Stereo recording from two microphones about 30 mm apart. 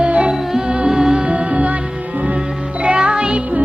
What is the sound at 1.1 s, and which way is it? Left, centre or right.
Music, right.